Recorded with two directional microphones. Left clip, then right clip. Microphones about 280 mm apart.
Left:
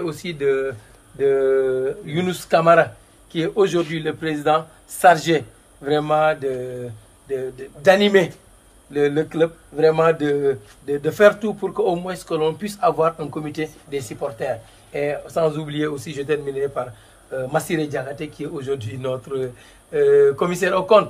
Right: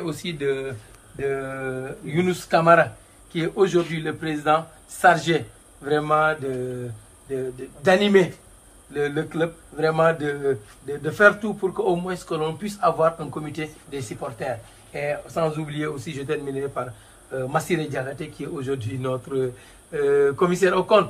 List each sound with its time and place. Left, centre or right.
0.0 s speech: centre
1.2 s a man's voice: left